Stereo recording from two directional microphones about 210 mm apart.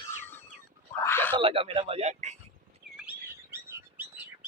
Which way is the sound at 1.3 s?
25° right (ahead or behind).